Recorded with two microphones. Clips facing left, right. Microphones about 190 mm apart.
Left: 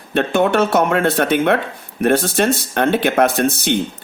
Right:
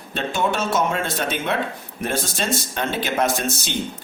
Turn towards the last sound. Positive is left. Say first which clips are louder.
# left 7 dB
turn(degrees=60)  # may be behind; listen again after turning